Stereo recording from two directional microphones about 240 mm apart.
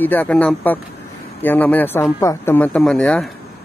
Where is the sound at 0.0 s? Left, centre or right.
Centre.